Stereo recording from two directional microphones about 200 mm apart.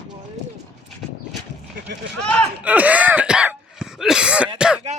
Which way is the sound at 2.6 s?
5° right (ahead or behind).